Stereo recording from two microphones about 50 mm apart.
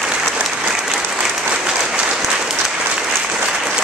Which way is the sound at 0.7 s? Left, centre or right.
Centre.